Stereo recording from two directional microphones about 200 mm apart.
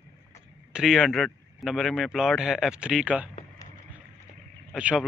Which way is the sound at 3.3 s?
35° left (ahead or behind).